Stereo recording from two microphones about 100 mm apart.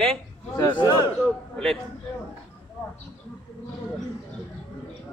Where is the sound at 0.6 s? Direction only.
50° left (ahead or behind).